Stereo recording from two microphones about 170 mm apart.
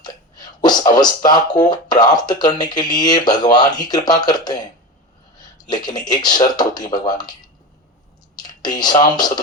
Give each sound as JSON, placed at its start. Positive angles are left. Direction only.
{"t": 0.0, "sound": "speech", "side_deg": 25}
{"t": 5.6, "sound": "speech", "side_deg": 25}
{"t": 8.4, "sound": "speech", "side_deg": 25}